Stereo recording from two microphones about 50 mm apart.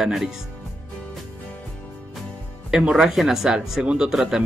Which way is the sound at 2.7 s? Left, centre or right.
Centre.